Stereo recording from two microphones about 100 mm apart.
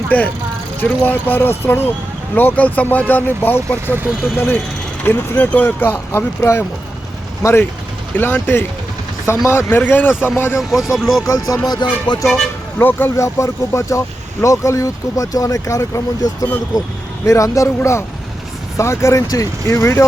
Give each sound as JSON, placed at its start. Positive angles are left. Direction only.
{"t": 0.1, "sound": "speech", "side_deg": 15}
{"t": 10.6, "sound": "speech", "side_deg": -5}
{"t": 11.2, "sound": "speech", "side_deg": 35}
{"t": 12.8, "sound": "speech", "side_deg": 20}
{"t": 13.2, "sound": "speech", "side_deg": 30}